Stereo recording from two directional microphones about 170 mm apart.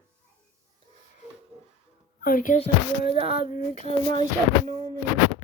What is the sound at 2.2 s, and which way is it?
Speech, 55° left (ahead or behind).